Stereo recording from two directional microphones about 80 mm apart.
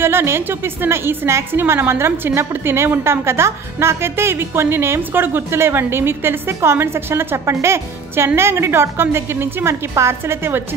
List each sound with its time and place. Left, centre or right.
0.0 s a woman's voice: right